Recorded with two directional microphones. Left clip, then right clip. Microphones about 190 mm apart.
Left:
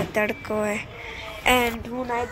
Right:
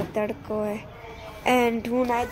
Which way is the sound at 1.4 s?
40° right (ahead or behind).